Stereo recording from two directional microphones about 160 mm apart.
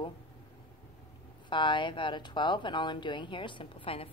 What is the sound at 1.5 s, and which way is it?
Speech, 30° left (ahead or behind).